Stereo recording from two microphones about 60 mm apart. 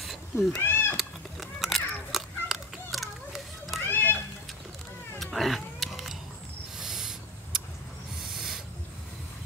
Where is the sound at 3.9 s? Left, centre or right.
Left.